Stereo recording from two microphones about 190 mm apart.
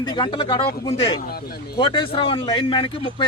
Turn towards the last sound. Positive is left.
turn(degrees=25)  # may be behind; listen again after turning